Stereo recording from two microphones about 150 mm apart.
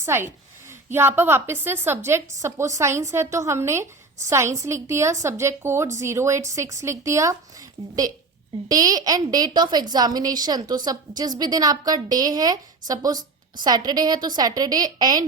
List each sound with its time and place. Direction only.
0.0 s a woman's voice: 15° right (ahead or behind)
8.7 s a woman's voice: 25° right (ahead or behind)